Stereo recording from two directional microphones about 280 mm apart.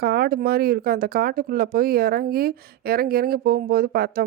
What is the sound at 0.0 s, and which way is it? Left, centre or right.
A woman's voice, right.